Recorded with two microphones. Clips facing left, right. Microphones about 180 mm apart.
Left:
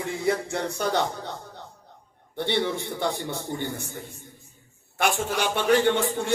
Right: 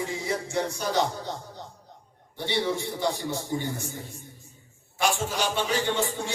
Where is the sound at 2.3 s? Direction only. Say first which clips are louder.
Left 4 dB; 55° left (ahead or behind).